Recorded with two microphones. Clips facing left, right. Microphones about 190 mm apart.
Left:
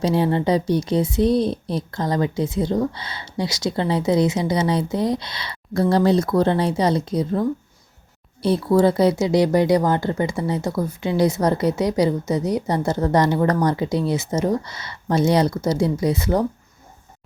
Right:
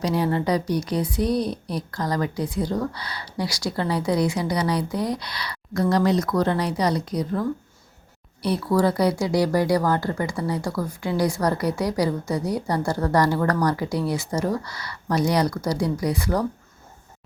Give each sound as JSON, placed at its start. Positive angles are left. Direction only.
{"t": 0.0, "sound": "speech", "side_deg": 25}